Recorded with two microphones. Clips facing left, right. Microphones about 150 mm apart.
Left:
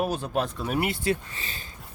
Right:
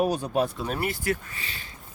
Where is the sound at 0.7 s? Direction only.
20° left (ahead or behind).